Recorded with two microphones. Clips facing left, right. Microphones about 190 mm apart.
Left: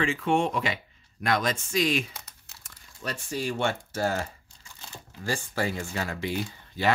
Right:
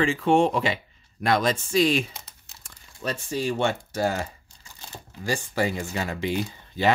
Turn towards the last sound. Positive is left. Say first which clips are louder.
# right 3 dB
turn(degrees=-20)  # may be behind; listen again after turning